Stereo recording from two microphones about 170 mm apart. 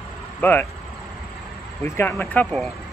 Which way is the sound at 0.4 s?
10° left (ahead or behind).